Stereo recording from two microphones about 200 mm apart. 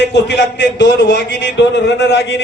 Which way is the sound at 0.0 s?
60° left (ahead or behind).